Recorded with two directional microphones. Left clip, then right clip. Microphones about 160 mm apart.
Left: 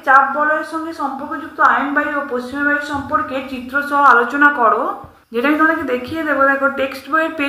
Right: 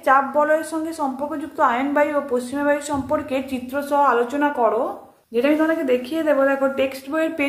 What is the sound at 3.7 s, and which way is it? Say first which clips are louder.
A woman's voice: left 7 dB; 25° right (ahead or behind).